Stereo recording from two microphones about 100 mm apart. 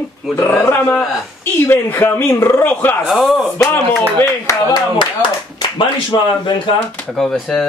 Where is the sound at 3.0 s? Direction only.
5° right (ahead or behind).